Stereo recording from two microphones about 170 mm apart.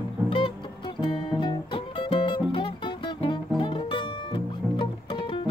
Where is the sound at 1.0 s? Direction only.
30° left (ahead or behind).